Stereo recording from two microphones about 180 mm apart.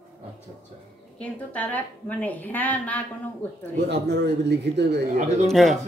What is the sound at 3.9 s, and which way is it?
A man's voice, 70° right (ahead or behind).